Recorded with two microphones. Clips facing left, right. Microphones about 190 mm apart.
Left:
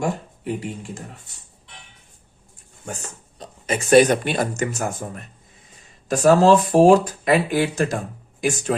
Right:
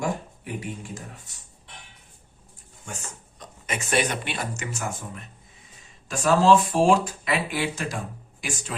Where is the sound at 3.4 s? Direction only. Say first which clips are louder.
Left 7 dB; 35° left (ahead or behind).